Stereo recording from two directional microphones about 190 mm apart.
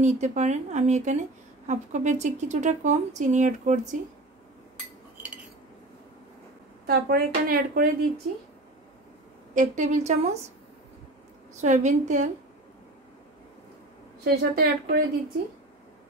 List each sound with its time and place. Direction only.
0.0 s speech: 35° right (ahead or behind)
6.9 s speech: 50° right (ahead or behind)
9.5 s speech: 40° right (ahead or behind)
11.6 s speech: 40° right (ahead or behind)
14.2 s a woman's voice: 60° right (ahead or behind)